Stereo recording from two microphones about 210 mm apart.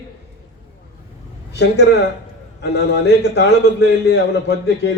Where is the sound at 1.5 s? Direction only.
55° left (ahead or behind).